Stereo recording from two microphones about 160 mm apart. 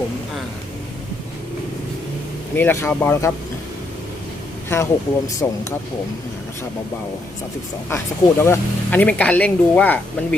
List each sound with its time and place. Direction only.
2.6 s speech: 10° left (ahead or behind)
4.7 s speech: 20° left (ahead or behind)
7.9 s speech: 15° left (ahead or behind)